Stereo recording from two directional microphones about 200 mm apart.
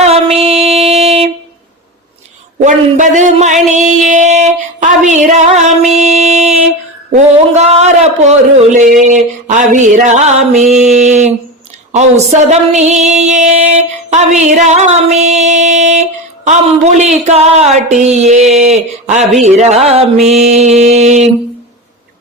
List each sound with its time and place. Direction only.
0.0 s music: 30° right (ahead or behind)
2.6 s female singing: 40° right (ahead or behind)
3.7 s a sound: 35° right (ahead or behind)
9.0 s female singing: 35° right (ahead or behind)
12.3 s female singing: 35° right (ahead or behind)